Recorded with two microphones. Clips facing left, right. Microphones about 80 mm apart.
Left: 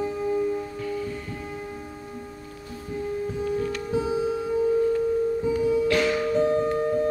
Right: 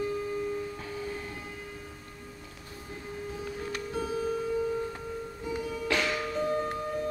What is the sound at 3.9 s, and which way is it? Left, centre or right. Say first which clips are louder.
Music: left 6 dB; centre.